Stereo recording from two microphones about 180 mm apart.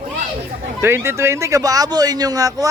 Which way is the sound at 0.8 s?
15° right (ahead or behind).